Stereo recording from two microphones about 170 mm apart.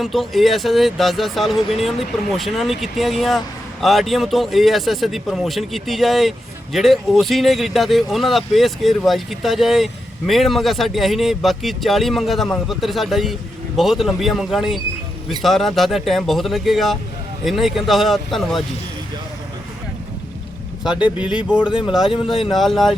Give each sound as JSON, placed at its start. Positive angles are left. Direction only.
{"t": 0.0, "sound": "speech", "side_deg": 0}
{"t": 20.8, "sound": "speech", "side_deg": -5}
{"t": 21.7, "sound": "speech", "side_deg": 30}
{"t": 22.4, "sound": "speech", "side_deg": 0}